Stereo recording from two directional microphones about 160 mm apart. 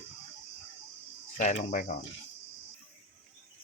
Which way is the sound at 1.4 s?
45° left (ahead or behind).